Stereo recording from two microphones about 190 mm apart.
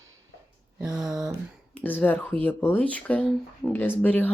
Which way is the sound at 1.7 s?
10° left (ahead or behind).